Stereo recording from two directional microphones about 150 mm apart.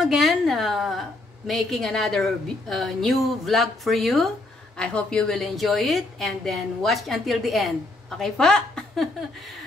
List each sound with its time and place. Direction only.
0.0 s a woman's voice: centre (ahead or behind)